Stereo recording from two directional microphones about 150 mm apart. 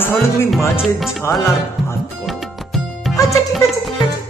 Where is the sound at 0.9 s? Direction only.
Centre (ahead or behind).